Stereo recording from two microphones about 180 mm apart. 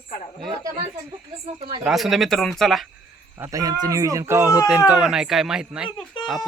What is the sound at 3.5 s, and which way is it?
Speech, 20° right (ahead or behind).